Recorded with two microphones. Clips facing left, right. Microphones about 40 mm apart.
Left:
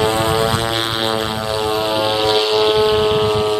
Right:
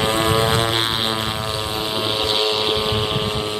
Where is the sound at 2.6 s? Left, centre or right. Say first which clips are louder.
Left 7 dB; centre.